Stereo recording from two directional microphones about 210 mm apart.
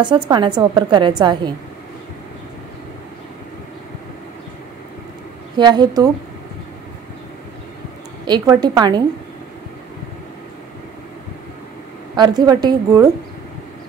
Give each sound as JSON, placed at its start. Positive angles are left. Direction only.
{"t": 0.3, "sound": "a woman's voice", "side_deg": -20}
{"t": 5.6, "sound": "a woman's voice", "side_deg": -20}
{"t": 8.3, "sound": "a woman's voice", "side_deg": -20}
{"t": 12.2, "sound": "a woman's voice", "side_deg": -20}